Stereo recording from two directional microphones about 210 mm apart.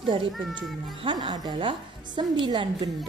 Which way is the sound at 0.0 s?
25° right (ahead or behind).